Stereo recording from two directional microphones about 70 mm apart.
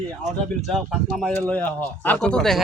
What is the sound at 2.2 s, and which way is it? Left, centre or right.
Speech, centre.